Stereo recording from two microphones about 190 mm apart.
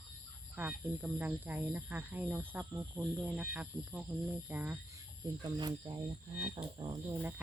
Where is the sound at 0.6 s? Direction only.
10° right (ahead or behind).